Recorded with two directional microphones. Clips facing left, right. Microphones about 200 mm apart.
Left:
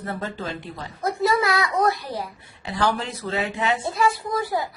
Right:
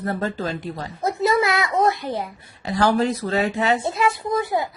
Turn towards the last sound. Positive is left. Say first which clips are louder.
# right 3 dB
turn(degrees=-20)  # may be behind; listen again after turning